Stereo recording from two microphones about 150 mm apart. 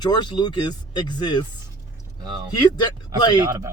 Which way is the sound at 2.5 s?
25° left (ahead or behind).